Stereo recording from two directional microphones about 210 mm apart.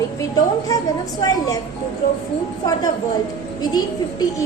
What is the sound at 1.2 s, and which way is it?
Speech, 15° left (ahead or behind).